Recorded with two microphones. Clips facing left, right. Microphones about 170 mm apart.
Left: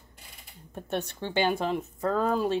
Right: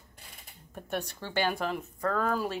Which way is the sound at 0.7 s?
25° left (ahead or behind).